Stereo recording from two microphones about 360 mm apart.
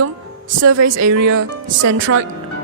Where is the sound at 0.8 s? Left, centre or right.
Right.